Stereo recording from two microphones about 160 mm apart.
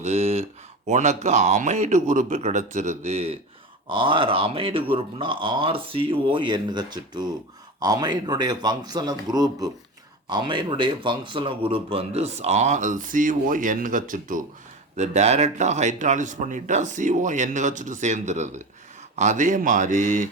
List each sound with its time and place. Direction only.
0.0 s a sound: 40° right (ahead or behind)
0.9 s speech: 45° right (ahead or behind)
14.9 s speech: 45° right (ahead or behind)